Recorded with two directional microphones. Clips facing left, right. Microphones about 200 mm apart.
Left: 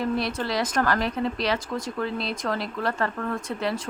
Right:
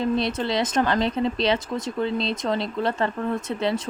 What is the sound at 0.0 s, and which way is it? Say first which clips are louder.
Speech: right 3 dB; 20° right (ahead or behind).